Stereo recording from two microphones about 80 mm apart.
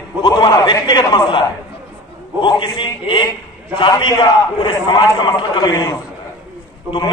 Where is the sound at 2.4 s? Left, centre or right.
Left.